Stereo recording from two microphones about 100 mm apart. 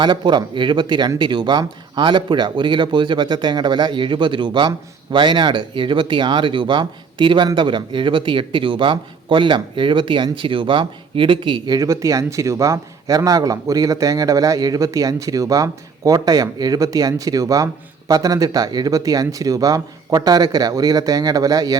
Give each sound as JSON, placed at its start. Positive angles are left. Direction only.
{"t": 0.0, "sound": "speech", "side_deg": -50}
{"t": 11.8, "sound": "speech", "side_deg": -35}